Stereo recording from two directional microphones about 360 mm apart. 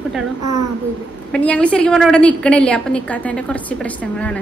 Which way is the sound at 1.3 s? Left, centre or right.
Centre.